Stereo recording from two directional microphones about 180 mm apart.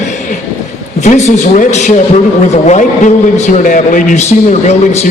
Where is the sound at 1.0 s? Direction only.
40° left (ahead or behind).